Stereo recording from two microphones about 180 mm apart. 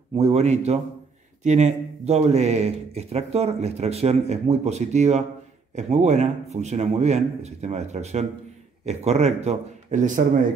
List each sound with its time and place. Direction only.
0.1 s a man's voice: 35° right (ahead or behind)